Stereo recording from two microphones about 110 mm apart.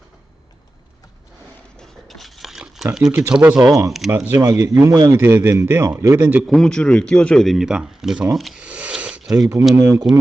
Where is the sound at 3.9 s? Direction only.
Centre (ahead or behind).